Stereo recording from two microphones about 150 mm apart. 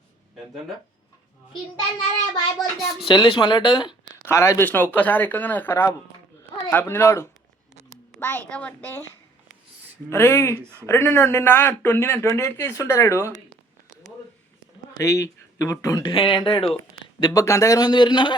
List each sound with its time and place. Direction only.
2.6 s speech: centre (ahead or behind)
3.1 s speech: 35° left (ahead or behind)
4.3 s speech: 20° left (ahead or behind)
10.1 s speech: 15° left (ahead or behind)
10.6 s speech: 15° right (ahead or behind)
10.8 s a man's voice: 15° left (ahead or behind)
14.9 s a man's voice: 20° left (ahead or behind)